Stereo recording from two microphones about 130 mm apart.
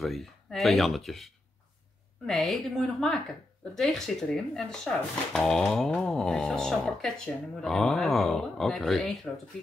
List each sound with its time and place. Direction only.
0.0 s a woman's voice: centre (ahead or behind)